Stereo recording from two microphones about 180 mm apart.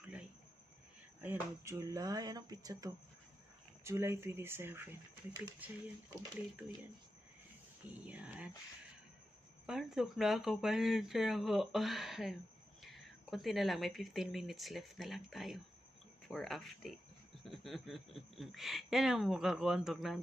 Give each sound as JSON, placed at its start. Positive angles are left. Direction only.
{"t": 1.2, "sound": "speech", "side_deg": -15}
{"t": 7.8, "sound": "speech", "side_deg": -10}
{"t": 9.7, "sound": "speech", "side_deg": 0}